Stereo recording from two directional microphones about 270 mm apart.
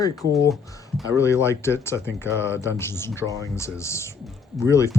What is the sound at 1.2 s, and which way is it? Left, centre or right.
A man's voice, centre.